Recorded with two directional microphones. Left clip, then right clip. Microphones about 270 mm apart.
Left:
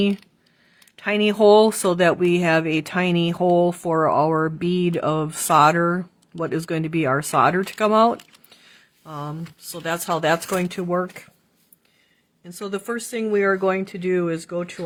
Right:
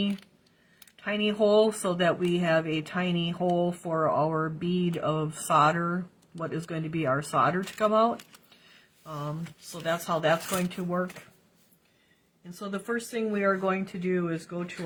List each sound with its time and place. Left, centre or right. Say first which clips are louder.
0.9 s speech: left 8 dB; left
12.5 s speech: left 5 dB; left